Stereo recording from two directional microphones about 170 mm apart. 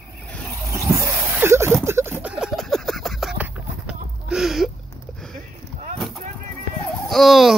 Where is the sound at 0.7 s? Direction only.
20° right (ahead or behind).